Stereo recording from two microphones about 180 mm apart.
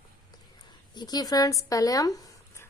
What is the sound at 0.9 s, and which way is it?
Speech, 20° left (ahead or behind).